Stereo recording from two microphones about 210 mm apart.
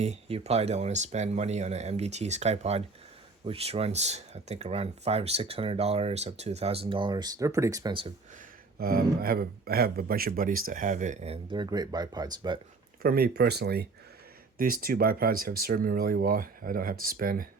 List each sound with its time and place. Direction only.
0.0 s speech: 30° right (ahead or behind)
8.8 s speech: 45° right (ahead or behind); by 12.5 s 20° right (ahead or behind)
13.0 s speech: 45° right (ahead or behind)